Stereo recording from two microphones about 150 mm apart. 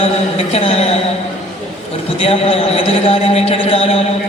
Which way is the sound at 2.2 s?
40° left (ahead or behind).